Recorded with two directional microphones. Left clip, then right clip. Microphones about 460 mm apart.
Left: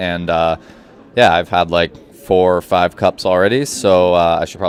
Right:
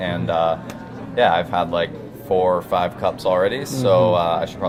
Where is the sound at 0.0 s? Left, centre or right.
Left.